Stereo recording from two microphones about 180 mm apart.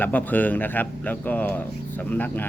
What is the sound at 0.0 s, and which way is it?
A man's voice, 10° left (ahead or behind).